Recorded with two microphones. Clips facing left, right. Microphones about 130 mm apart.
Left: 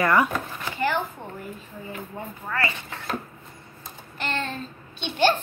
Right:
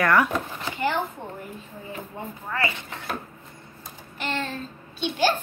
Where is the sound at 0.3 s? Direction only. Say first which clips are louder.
Right 1 dB; 20° right (ahead or behind).